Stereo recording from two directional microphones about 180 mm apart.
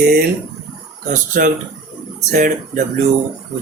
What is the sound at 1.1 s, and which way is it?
A man's voice, 45° right (ahead or behind).